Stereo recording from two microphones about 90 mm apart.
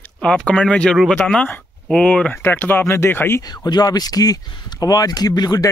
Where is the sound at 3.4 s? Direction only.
50° left (ahead or behind).